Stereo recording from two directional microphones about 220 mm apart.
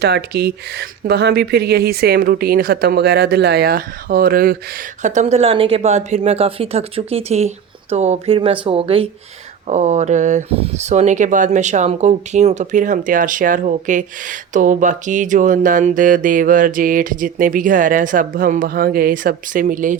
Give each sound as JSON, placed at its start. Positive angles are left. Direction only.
{"t": 0.0, "sound": "speech", "side_deg": -45}